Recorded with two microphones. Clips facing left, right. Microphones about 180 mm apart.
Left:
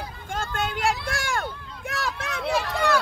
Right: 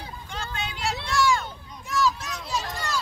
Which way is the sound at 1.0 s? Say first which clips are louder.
Right 4 dB; 55° left (ahead or behind).